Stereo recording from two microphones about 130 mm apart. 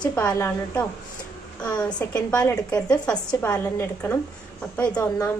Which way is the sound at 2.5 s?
30° left (ahead or behind).